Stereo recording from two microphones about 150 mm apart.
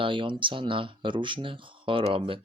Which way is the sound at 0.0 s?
35° right (ahead or behind).